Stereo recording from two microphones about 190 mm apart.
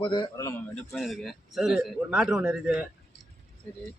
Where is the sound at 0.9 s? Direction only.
Centre (ahead or behind).